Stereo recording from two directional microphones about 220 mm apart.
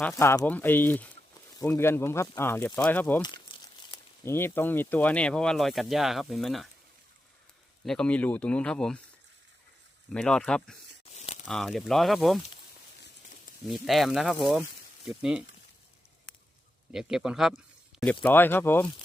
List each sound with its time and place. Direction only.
0.0 s speech: 10° left (ahead or behind)
3.2 s crumpling: 20° left (ahead or behind)
4.3 s speech: 10° left (ahead or behind)
7.9 s speech: 5° left (ahead or behind)
10.1 s speech: 5° left (ahead or behind)
11.1 s crumpling: 30° left (ahead or behind)
11.4 s speech: centre (ahead or behind)
13.7 s speech: centre (ahead or behind)
16.9 s speech: centre (ahead or behind)